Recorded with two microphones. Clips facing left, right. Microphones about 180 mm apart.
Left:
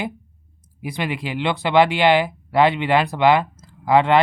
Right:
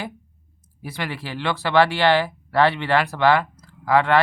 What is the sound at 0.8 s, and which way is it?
Speech, 15° left (ahead or behind).